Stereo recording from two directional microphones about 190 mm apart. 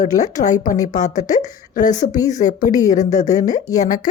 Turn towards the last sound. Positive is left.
turn(degrees=40)  # may be behind; listen again after turning